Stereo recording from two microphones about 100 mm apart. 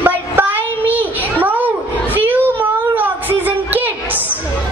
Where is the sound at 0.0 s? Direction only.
20° right (ahead or behind).